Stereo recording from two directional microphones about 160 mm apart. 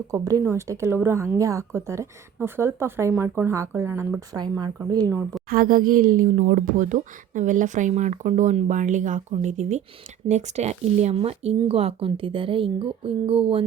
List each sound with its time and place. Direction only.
0.1 s a woman's voice: 20° right (ahead or behind)
5.5 s speech: 65° right (ahead or behind); by 13.6 s 35° right (ahead or behind)